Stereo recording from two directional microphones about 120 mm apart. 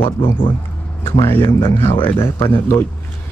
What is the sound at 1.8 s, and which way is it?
A man's voice, 20° left (ahead or behind).